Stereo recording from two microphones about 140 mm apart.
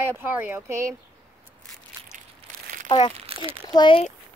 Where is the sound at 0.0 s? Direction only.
15° right (ahead or behind).